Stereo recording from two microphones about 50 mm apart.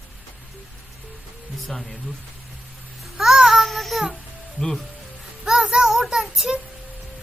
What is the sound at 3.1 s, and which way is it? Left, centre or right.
Child singing, centre.